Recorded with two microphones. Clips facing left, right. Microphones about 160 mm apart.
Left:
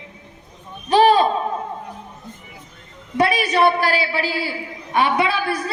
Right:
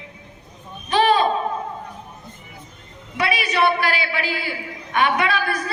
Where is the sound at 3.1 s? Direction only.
45° left (ahead or behind).